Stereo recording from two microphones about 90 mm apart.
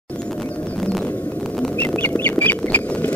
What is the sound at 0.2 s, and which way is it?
Bird, 10° left (ahead or behind).